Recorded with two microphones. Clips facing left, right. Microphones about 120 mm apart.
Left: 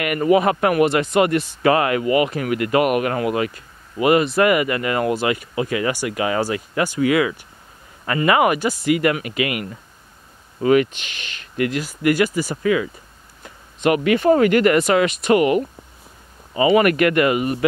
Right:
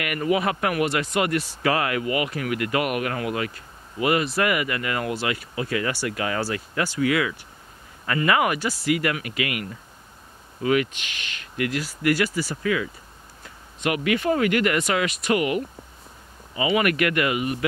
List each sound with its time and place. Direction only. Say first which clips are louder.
0.0 s speech: left 7 dB; 35° left (ahead or behind)
10.6 s speech: left 6 dB; 35° left (ahead or behind)
11.7 s speech: left 2 dB; 20° left (ahead or behind)
13.8 s speech: left 7 dB; 35° left (ahead or behind)